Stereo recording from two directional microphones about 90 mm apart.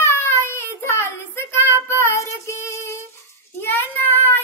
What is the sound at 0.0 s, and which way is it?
Child singing, 30° left (ahead or behind).